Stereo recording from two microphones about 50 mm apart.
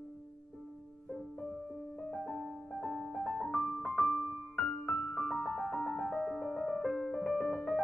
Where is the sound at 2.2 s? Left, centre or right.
Centre.